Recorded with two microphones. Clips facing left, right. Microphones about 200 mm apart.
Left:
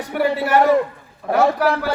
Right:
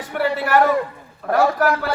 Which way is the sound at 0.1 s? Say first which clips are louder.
Left 2 dB; 10° left (ahead or behind).